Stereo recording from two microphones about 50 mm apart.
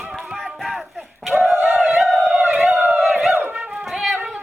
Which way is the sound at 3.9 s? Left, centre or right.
Centre.